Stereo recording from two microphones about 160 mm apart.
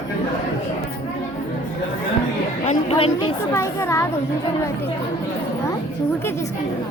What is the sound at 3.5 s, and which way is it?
Speech, 15° left (ahead or behind).